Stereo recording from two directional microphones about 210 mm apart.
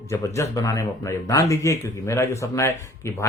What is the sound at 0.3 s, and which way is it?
Speech, 15° left (ahead or behind).